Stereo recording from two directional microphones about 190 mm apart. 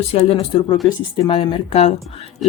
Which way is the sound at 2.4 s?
Centre (ahead or behind).